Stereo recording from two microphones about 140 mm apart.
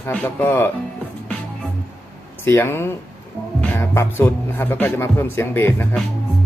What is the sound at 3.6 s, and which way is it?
Music, 15° left (ahead or behind).